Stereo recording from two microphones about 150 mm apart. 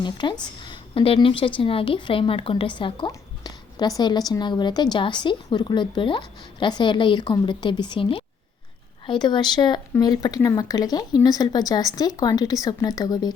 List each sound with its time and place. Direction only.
0.0 s a woman's voice: 30° left (ahead or behind)